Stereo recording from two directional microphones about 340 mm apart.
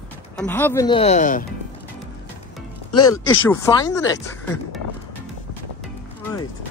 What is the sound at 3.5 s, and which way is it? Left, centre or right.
Speech, centre.